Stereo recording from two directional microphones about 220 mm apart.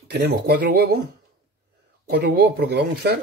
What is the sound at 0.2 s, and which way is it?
Speech, 45° right (ahead or behind).